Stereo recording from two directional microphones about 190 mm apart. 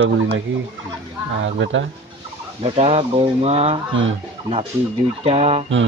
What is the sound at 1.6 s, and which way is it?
Speech, 80° right.